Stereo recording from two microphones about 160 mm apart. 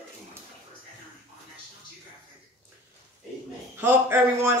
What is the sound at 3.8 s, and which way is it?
Speech, 15° right (ahead or behind).